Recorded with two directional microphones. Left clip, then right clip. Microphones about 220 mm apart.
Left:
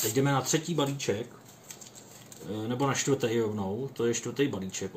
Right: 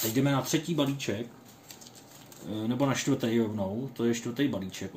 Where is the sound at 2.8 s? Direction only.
15° right (ahead or behind).